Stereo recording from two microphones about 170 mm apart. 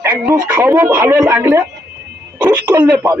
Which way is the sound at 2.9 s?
15° right (ahead or behind).